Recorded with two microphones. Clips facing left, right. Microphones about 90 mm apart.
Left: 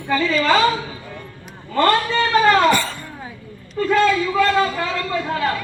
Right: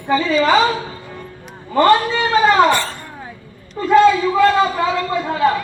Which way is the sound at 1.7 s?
15° right (ahead or behind).